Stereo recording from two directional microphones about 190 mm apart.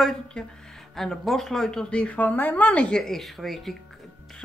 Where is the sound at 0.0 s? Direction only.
5° left (ahead or behind).